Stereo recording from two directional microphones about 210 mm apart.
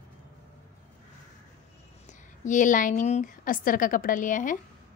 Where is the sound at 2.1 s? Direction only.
35° left (ahead or behind).